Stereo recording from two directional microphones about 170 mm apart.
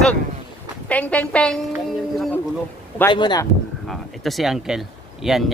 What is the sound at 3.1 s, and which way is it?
Speech, 25° left (ahead or behind).